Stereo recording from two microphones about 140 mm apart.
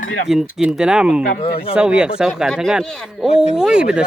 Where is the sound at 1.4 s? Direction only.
40° left (ahead or behind).